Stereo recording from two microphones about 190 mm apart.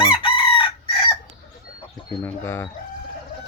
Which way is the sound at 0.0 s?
25° left (ahead or behind).